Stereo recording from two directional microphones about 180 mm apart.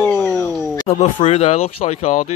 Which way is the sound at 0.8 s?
40° left (ahead or behind).